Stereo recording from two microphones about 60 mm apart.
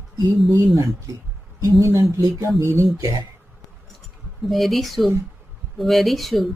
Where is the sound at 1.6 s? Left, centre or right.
Right.